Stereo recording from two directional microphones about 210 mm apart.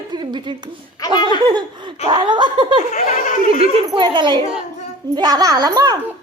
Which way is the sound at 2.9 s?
35° left (ahead or behind).